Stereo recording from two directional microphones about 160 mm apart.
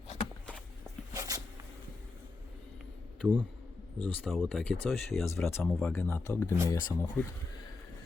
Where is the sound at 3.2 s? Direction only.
10° right (ahead or behind).